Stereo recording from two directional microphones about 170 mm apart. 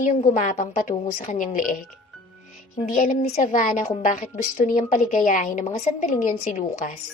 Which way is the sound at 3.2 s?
40° left (ahead or behind).